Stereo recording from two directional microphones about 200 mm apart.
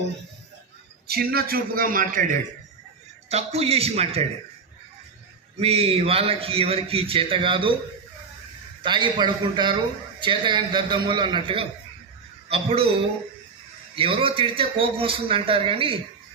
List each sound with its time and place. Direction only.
1.0 s a man's voice: 50° right (ahead or behind); by 4.3 s 30° right (ahead or behind)
5.5 s a man's voice: 30° right (ahead or behind)
8.8 s a man's voice: 25° right (ahead or behind)
13.9 s a man's voice: 25° right (ahead or behind)